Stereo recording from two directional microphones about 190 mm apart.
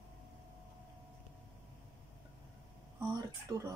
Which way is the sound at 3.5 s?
20° right (ahead or behind).